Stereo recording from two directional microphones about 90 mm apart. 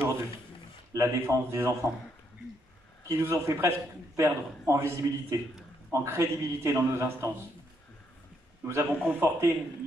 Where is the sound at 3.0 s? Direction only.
35° right (ahead or behind).